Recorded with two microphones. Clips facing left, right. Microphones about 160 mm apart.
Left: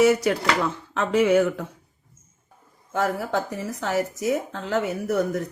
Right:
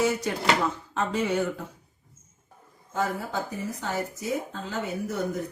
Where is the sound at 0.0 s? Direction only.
80° left.